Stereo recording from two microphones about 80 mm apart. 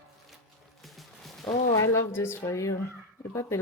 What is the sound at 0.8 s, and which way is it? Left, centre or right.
Music, centre.